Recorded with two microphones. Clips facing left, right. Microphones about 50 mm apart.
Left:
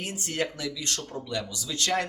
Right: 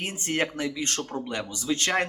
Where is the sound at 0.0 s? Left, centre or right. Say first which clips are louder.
Right 3 dB; right.